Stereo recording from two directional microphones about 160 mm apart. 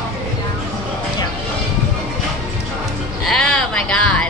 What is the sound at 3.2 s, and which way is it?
Speech, 5° left (ahead or behind).